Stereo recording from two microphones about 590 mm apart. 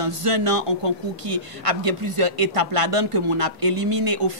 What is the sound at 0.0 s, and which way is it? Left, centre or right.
A man's voice, right.